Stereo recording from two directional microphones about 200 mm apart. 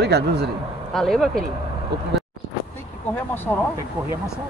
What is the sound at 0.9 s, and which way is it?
Speech, centre (ahead or behind).